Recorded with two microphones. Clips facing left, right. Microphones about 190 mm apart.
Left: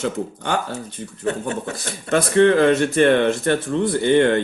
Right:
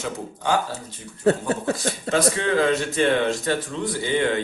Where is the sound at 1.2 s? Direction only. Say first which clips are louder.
Right 3 dB; 35° right (ahead or behind).